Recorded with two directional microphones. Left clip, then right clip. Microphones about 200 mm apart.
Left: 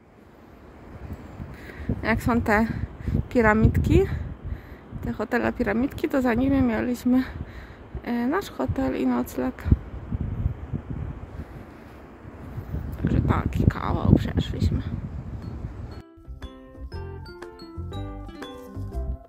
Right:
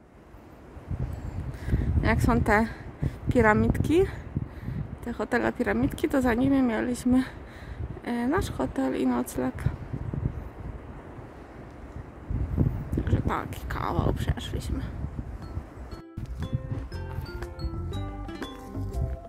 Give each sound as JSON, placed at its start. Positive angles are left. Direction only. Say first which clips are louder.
{"t": 2.0, "sound": "speech", "louder": "left 1 dB", "side_deg": -10}
{"t": 13.0, "sound": "speech", "louder": "left 4 dB", "side_deg": -5}
{"t": 16.4, "sound": "music", "louder": "right 4 dB", "side_deg": 0}